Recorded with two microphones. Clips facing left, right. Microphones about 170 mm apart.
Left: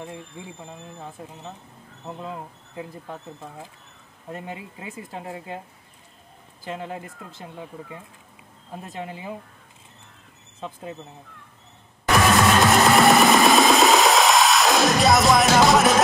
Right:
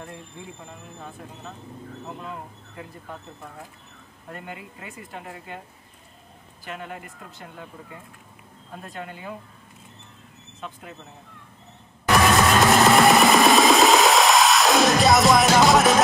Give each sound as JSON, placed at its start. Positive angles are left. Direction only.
{"t": 2.0, "sound": "speech", "side_deg": 25}
{"t": 4.3, "sound": "speech", "side_deg": 25}
{"t": 6.7, "sound": "speech", "side_deg": 25}
{"t": 10.6, "sound": "speech", "side_deg": 25}
{"t": 12.1, "sound": "a sound", "side_deg": 0}